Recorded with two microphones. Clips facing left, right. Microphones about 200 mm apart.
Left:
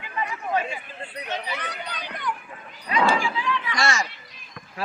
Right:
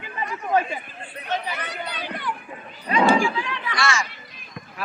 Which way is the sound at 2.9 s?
20° right (ahead or behind).